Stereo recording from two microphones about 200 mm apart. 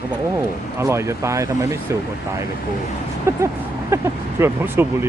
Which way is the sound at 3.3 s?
15° right (ahead or behind).